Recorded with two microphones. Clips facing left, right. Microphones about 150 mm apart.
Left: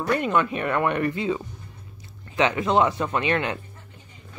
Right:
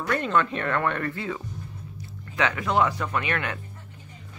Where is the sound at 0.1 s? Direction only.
15° left (ahead or behind).